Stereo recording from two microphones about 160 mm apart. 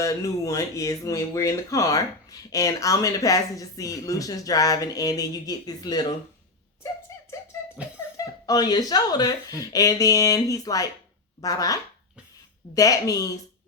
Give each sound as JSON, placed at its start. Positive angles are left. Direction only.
{"t": 0.0, "sound": "speech", "side_deg": 20}
{"t": 7.3, "sound": "music", "side_deg": 20}
{"t": 8.1, "sound": "speech", "side_deg": 20}